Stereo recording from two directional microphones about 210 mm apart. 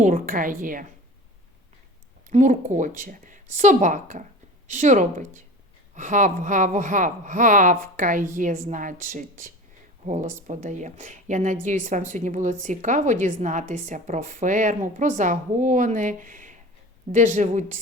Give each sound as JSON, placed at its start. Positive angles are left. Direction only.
{"t": 0.0, "sound": "a woman's voice", "side_deg": -40}
{"t": 2.3, "sound": "a woman's voice", "side_deg": -35}